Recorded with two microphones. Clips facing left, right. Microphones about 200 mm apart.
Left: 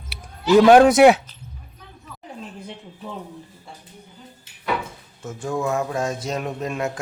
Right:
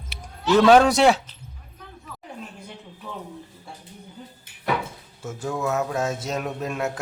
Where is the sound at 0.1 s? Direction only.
10° left (ahead or behind).